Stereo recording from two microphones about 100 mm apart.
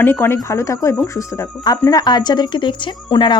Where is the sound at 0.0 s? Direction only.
25° left (ahead or behind).